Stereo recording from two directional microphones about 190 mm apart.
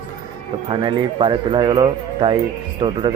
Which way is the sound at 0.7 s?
25° right (ahead or behind).